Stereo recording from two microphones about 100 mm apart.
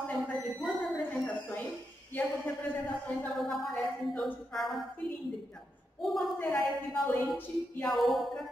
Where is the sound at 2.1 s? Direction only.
15° left (ahead or behind).